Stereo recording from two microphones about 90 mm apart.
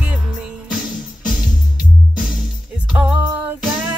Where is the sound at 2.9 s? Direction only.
10° right (ahead or behind).